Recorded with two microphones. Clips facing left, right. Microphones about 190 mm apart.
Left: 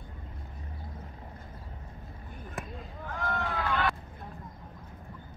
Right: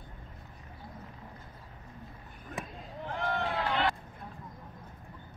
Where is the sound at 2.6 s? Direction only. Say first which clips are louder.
Even; centre (ahead or behind).